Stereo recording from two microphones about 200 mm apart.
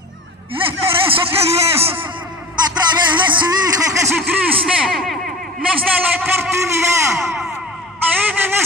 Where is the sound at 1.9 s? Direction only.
10° right (ahead or behind).